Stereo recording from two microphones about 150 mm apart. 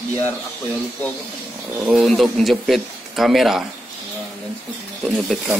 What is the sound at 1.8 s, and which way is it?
Speech, 5° right (ahead or behind).